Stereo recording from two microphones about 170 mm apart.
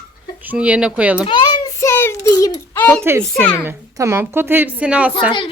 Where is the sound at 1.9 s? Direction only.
15° left (ahead or behind).